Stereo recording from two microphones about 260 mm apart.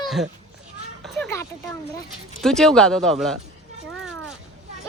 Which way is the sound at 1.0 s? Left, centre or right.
Centre.